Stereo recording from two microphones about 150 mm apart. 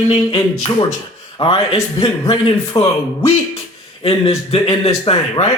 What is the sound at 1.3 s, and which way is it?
Speech, 40° left (ahead or behind).